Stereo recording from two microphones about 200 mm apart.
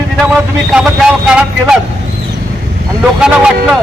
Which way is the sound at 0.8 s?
5° right (ahead or behind).